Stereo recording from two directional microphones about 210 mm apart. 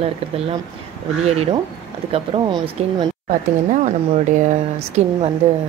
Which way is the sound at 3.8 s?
35° right (ahead or behind).